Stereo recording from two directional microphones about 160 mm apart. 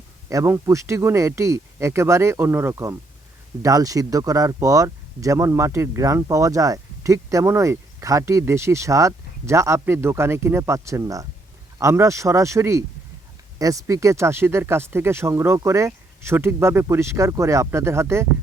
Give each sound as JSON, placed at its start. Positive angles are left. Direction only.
{"t": 0.3, "sound": "speech", "side_deg": -20}